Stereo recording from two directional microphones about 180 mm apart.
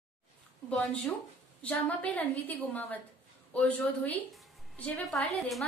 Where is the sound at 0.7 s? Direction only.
5° left (ahead or behind).